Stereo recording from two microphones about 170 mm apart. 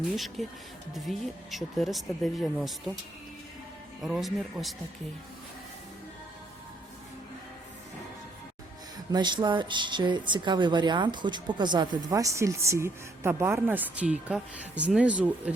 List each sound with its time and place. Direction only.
0.4 s speech: centre (ahead or behind)
4.0 s speech: centre (ahead or behind)
9.1 s speech: 25° right (ahead or behind); by 15.5 s 5° right (ahead or behind)